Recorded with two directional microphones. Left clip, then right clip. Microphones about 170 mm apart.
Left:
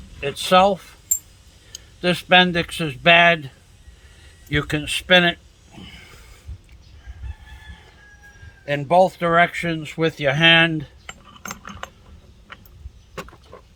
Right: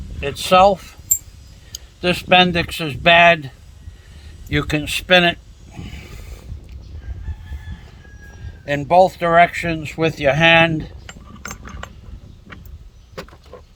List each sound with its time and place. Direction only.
0.2 s speech: 30° right (ahead or behind)
2.0 s speech: 30° right (ahead or behind)
8.6 s speech: 30° right (ahead or behind)